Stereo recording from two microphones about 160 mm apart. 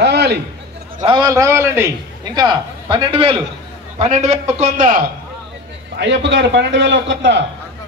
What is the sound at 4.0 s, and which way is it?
A man's voice, 45° right (ahead or behind).